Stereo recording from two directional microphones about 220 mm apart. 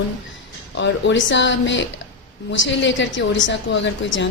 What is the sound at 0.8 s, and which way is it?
A woman's voice, 55° left (ahead or behind).